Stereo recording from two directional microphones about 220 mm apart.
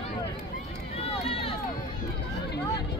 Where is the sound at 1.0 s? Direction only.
25° left (ahead or behind).